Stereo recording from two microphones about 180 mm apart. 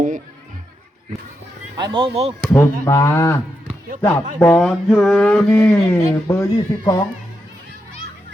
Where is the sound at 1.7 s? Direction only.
25° right (ahead or behind).